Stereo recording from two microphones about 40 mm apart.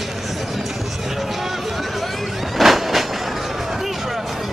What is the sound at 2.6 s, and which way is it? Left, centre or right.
Train, centre.